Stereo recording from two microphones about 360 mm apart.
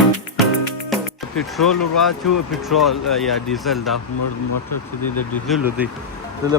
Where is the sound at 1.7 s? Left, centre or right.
Left.